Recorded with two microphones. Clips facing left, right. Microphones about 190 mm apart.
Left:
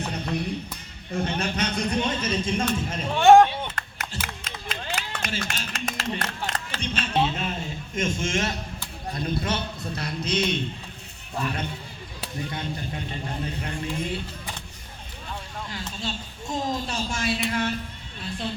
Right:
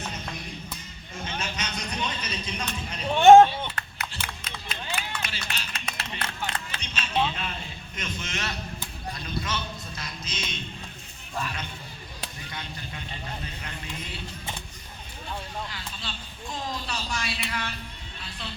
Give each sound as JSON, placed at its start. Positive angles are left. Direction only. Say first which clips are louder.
{"t": 0.0, "sound": "music", "louder": "left 8 dB", "side_deg": 65}
{"t": 1.1, "sound": "a man's voice", "louder": "left 8 dB", "side_deg": 60}
{"t": 3.2, "sound": "speech", "louder": "right 1 dB", "side_deg": -20}
{"t": 3.8, "sound": "a sound", "louder": "left 2 dB", "side_deg": 45}
{"t": 4.7, "sound": "run", "louder": "left 2 dB", "side_deg": 45}
{"t": 9.1, "sound": "a man's voice", "louder": "left 6 dB", "side_deg": 55}
{"t": 12.5, "sound": "a man's voice", "louder": "left 7 dB", "side_deg": 50}
{"t": 16.0, "sound": "a sound", "louder": "left 6 dB", "side_deg": 45}
{"t": 18.2, "sound": "music", "louder": "left 9 dB", "side_deg": 50}